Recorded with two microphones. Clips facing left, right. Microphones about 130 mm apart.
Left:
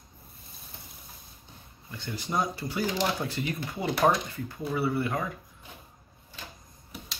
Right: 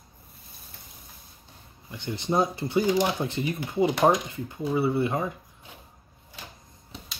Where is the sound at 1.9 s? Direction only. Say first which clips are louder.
Right 6 dB; 20° right (ahead or behind).